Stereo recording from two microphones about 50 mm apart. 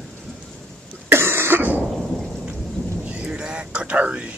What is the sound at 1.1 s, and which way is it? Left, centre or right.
Cough, right.